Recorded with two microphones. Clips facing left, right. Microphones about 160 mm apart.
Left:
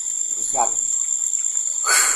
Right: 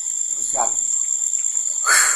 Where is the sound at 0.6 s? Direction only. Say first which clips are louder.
Left 2 dB; 10° left (ahead or behind).